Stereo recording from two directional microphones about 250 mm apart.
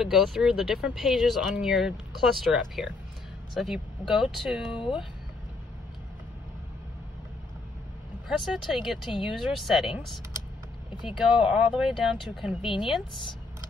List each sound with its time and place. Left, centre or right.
0.0 s speech: centre
8.3 s speech: centre
11.1 s speech: centre